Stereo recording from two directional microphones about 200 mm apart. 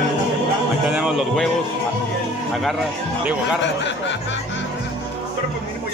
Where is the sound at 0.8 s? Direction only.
5° right (ahead or behind).